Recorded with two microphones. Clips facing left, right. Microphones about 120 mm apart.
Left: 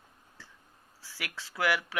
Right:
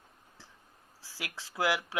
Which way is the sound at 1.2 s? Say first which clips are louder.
Even; 20° right (ahead or behind).